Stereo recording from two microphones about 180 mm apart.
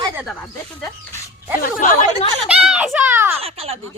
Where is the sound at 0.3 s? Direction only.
10° left (ahead or behind).